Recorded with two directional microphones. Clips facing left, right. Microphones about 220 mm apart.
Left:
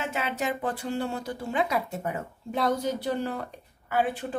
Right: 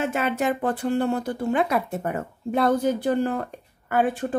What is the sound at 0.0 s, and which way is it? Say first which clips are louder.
Speech: right 6 dB; 50° right (ahead or behind).